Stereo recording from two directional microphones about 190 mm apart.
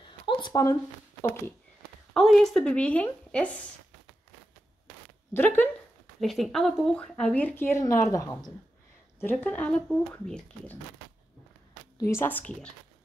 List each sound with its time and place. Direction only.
0.3 s speech: 20° left (ahead or behind)
2.1 s a woman's voice: centre (ahead or behind)
5.3 s speech: 10° left (ahead or behind)
12.1 s speech: 10° left (ahead or behind)